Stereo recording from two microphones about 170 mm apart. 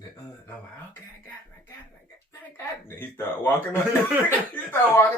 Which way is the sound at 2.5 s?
15° left (ahead or behind).